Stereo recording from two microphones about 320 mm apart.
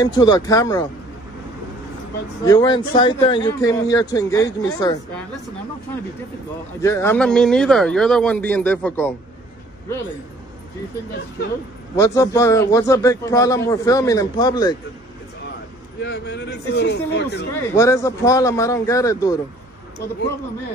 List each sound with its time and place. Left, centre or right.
0.0 s speech: centre
2.4 s speech: centre
6.8 s speech: centre
11.9 s speech: centre
16.0 s speech: left
17.7 s speech: centre